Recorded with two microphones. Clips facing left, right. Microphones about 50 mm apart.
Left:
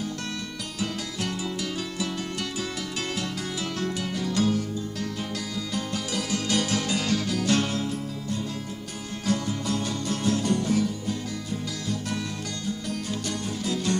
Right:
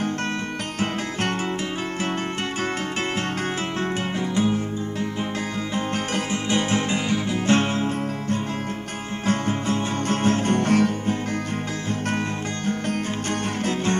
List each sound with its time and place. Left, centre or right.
4.4 s music: right
5.8 s music: right